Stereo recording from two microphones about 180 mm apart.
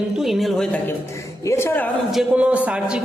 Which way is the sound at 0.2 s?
Centre (ahead or behind).